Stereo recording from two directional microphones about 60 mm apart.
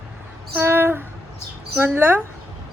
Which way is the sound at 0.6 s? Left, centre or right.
Right.